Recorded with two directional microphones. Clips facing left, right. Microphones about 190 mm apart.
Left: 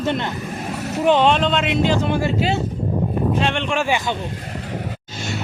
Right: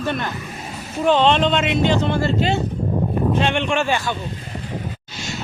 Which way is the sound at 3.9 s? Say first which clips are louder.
Left 1 dB; 15° left (ahead or behind).